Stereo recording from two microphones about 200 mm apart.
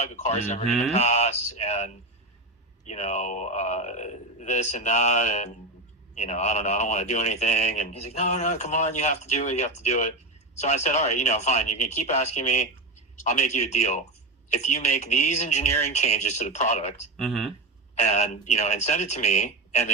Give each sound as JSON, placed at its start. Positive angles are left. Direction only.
{"t": 0.2, "sound": "speech", "side_deg": 35}
{"t": 17.2, "sound": "speech", "side_deg": 0}
{"t": 18.0, "sound": "speech", "side_deg": 35}